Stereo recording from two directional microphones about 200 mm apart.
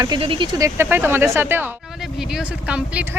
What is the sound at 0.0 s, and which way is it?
Speech, 25° right (ahead or behind).